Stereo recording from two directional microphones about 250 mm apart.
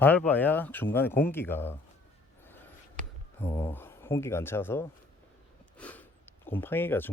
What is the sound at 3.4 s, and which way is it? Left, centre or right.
Speech, centre.